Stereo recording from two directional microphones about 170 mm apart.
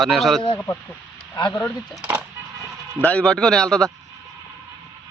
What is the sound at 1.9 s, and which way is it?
Speech, 5° right (ahead or behind).